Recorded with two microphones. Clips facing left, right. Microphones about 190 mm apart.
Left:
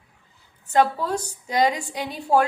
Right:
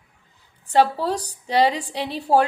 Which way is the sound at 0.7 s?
35° right (ahead or behind).